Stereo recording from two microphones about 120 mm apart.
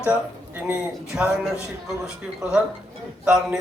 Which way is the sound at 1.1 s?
5° right (ahead or behind).